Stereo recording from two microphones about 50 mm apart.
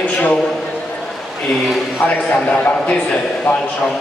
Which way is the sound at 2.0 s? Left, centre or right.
Left.